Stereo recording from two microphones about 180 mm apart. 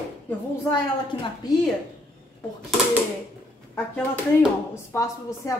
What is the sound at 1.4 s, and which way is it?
Speech, 20° left (ahead or behind).